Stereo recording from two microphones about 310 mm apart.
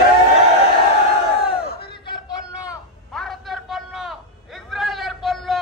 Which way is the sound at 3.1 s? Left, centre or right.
Centre.